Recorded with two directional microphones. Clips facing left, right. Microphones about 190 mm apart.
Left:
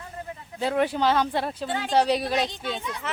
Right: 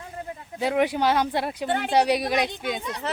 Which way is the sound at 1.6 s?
60° right (ahead or behind).